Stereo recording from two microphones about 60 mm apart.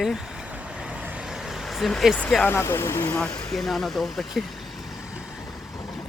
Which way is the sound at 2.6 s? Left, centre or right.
Left.